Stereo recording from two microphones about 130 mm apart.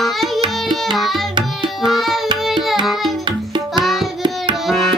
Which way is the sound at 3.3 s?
35° right (ahead or behind).